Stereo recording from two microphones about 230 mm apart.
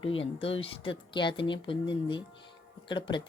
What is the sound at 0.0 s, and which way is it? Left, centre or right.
Speech, left.